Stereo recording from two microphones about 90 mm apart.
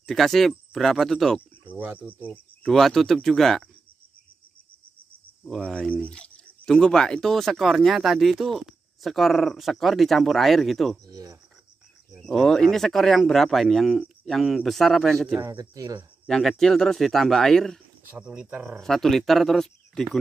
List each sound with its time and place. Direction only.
0.0 s speech: centre (ahead or behind)
1.7 s speech: 20° right (ahead or behind)
2.2 s cricket: 20° left (ahead or behind)
2.7 s speech: centre (ahead or behind)
5.7 s speech: 10° left (ahead or behind)
11.1 s speech: 40° right (ahead or behind)
12.3 s speech: 5° left (ahead or behind)
15.5 s speech: 40° right (ahead or behind)
16.3 s speech: 5° left (ahead or behind)
18.0 s speech: 15° right (ahead or behind)
18.8 s speech: 5° left (ahead or behind)